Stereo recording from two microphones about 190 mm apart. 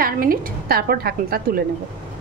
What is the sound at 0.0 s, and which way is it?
A woman's voice, 50° right (ahead or behind).